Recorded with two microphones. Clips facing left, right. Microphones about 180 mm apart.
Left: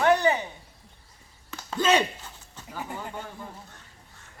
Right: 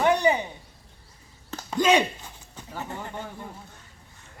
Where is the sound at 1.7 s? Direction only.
10° right (ahead or behind).